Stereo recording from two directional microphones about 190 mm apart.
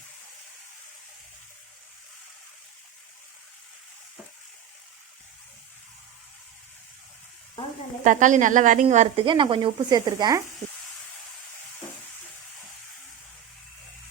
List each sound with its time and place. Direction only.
8.0 s speech: 40° right (ahead or behind)
9.2 s speech: 25° right (ahead or behind)